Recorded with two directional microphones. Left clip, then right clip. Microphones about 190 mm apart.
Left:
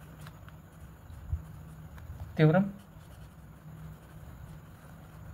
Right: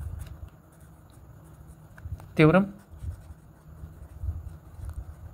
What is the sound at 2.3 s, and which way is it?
Speech, 40° right (ahead or behind).